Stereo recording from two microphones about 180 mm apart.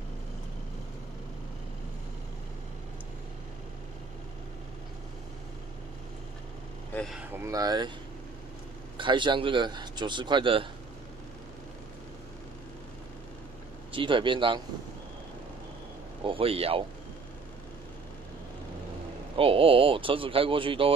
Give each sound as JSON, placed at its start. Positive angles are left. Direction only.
{"t": 6.9, "sound": "speech", "side_deg": 5}
{"t": 7.2, "sound": "a man's voice", "side_deg": -15}
{"t": 8.9, "sound": "a man's voice", "side_deg": -25}
{"t": 13.9, "sound": "a man's voice", "side_deg": -30}
{"t": 16.3, "sound": "speech", "side_deg": -30}
{"t": 19.3, "sound": "a man's voice", "side_deg": -30}